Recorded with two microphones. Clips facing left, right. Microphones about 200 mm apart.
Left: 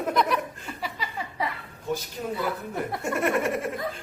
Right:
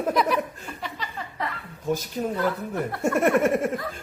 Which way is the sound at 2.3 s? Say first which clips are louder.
Right 1 dB; 10° left (ahead or behind).